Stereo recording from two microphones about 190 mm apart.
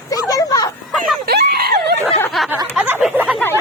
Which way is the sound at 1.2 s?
55° right (ahead or behind).